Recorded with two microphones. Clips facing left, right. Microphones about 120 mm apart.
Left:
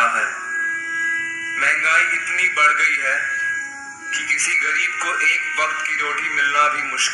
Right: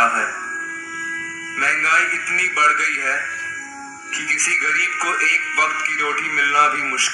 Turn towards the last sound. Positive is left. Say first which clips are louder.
# right 1 dB
turn(degrees=-30)  # may be behind; listen again after turning